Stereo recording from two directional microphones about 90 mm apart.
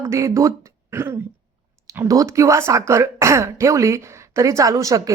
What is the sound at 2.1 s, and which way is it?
Speech, 40° right (ahead or behind).